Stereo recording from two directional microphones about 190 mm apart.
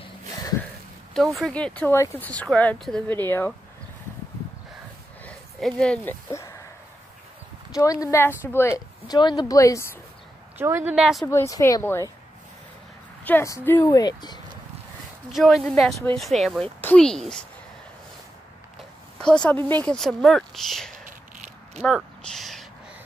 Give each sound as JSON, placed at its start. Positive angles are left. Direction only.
{"t": 1.1, "sound": "speech", "side_deg": 0}
{"t": 5.2, "sound": "a sound", "side_deg": 5}
{"t": 7.7, "sound": "speech", "side_deg": 20}
{"t": 10.6, "sound": "speech", "side_deg": -10}
{"t": 11.2, "sound": "speech", "side_deg": 15}
{"t": 13.2, "sound": "speech", "side_deg": 10}
{"t": 15.3, "sound": "speech", "side_deg": 0}
{"t": 19.1, "sound": "speech", "side_deg": 5}
{"t": 21.0, "sound": "a sound", "side_deg": -40}
{"t": 21.8, "sound": "a sound", "side_deg": 0}